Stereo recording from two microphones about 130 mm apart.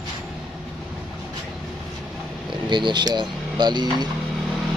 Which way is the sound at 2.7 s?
35° right (ahead or behind).